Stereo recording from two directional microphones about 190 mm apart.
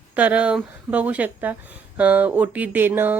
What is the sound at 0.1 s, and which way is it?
Speech, 10° right (ahead or behind).